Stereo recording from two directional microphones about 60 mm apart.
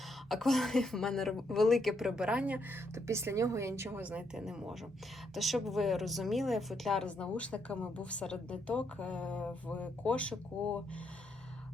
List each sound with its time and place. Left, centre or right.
0.3 s a woman's voice: centre
2.9 s a woman's voice: right
4.4 s a woman's voice: centre
7.0 s a woman's voice: centre